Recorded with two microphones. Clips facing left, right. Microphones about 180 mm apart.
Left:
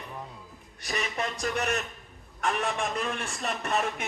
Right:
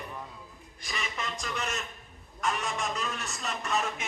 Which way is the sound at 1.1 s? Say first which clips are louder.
Left 6 dB; 60° left (ahead or behind).